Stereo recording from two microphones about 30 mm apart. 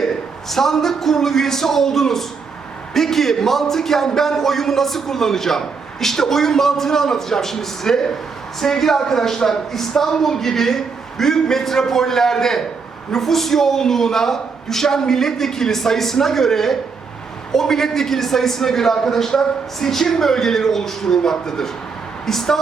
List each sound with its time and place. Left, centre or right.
0.0 s a man's voice: centre